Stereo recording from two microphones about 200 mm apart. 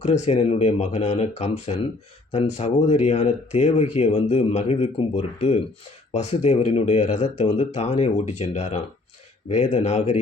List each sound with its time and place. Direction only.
0.0 s speech: 35° left (ahead or behind)